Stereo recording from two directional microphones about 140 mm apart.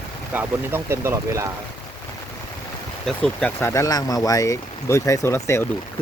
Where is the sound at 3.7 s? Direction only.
25° left (ahead or behind).